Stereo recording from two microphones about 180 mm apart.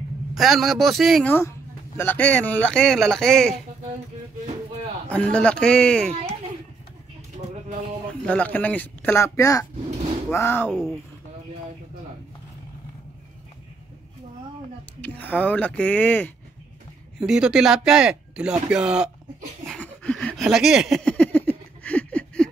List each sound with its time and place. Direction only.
0.3 s speech: centre (ahead or behind)
5.1 s speech: 5° left (ahead or behind)
8.3 s speech: 10° left (ahead or behind)
10.7 s speech: centre (ahead or behind)
15.0 s speech: 10° left (ahead or behind)
17.2 s speech: 5° right (ahead or behind)
19.7 s a sound: 10° left (ahead or behind)